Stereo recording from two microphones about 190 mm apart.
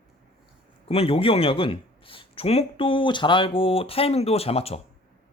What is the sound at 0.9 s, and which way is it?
A man's voice, 30° left (ahead or behind).